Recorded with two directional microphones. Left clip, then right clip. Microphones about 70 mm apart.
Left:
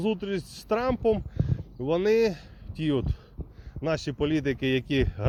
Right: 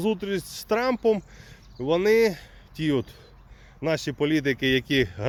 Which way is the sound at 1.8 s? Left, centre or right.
Right.